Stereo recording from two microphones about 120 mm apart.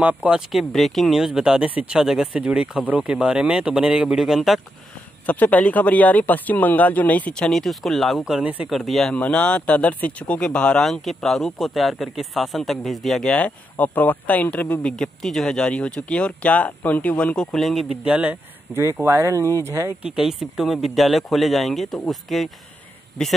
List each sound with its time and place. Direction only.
0.0 s speech: 10° right (ahead or behind)
0.5 s speech: centre (ahead or behind)
5.2 s speech: 15° left (ahead or behind)
18.0 s speech: 10° right (ahead or behind)
20.0 s speech: 5° right (ahead or behind)